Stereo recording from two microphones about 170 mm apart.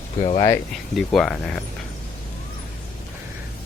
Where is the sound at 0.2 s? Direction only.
40° left (ahead or behind).